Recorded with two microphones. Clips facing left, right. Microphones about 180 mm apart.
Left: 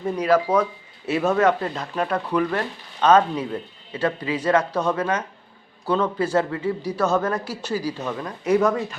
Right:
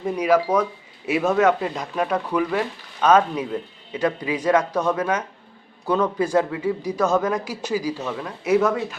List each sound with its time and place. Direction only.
0.0 s speech: 10° right (ahead or behind)
4.7 s speech: 10° left (ahead or behind)
4.9 s speech: 10° right (ahead or behind)